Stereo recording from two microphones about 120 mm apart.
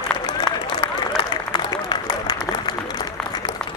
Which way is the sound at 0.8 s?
40° left (ahead or behind).